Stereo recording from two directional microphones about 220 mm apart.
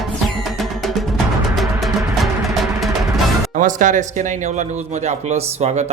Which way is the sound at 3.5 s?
35° right (ahead or behind).